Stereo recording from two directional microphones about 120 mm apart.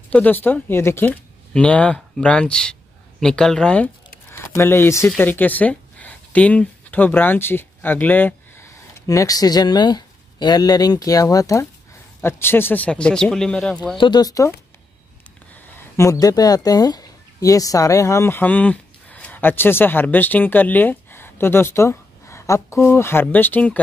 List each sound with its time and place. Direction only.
0.1 s speech: 15° left (ahead or behind)
4.3 s speech: 20° left (ahead or behind); by 13.7 s 5° left (ahead or behind)
13.9 s speech: 40° left (ahead or behind)
15.5 s speech: 15° left (ahead or behind)